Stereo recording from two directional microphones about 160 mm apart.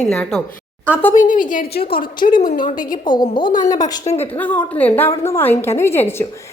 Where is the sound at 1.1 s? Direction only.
55° left (ahead or behind).